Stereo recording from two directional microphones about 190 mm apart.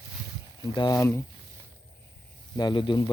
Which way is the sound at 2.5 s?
25° left (ahead or behind).